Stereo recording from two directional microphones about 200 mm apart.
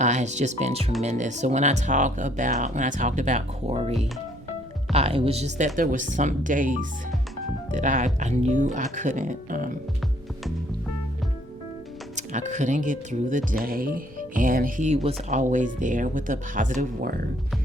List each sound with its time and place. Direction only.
0.0 s speech: 35° right (ahead or behind)
12.1 s speech: 35° right (ahead or behind)